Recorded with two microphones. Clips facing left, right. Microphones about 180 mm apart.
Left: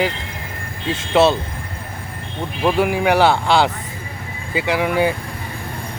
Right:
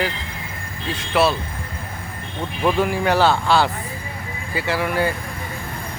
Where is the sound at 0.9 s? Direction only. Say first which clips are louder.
Left 4 dB; 25° left (ahead or behind).